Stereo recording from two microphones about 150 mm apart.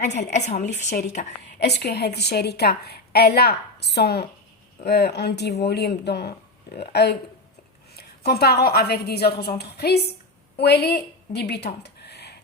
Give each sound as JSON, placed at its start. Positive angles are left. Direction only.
{"t": 0.0, "sound": "speech", "side_deg": 50}
{"t": 1.5, "sound": "a woman's voice", "side_deg": 90}